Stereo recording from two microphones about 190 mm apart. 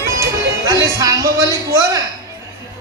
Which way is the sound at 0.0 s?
15° right (ahead or behind).